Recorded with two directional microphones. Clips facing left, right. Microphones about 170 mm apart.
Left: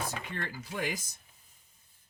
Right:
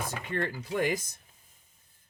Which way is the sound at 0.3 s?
50° right (ahead or behind).